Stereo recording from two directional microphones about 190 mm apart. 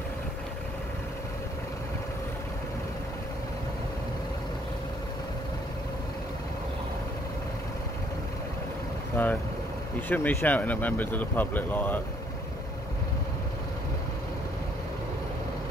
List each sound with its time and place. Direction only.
9.1 s boat: 10° left (ahead or behind)
10.0 s speech: 10° left (ahead or behind)